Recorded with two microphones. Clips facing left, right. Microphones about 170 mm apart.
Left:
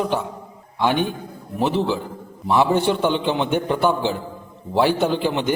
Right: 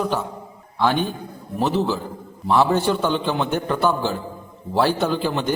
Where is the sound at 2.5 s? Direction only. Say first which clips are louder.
Even; 15° left (ahead or behind).